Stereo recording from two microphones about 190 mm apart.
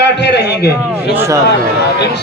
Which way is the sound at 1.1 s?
15° right (ahead or behind).